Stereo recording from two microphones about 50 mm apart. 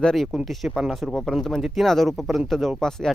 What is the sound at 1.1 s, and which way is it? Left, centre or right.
Speech, centre.